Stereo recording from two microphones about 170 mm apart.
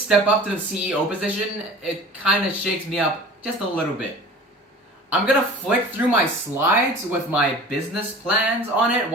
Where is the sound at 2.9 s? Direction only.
5° right (ahead or behind).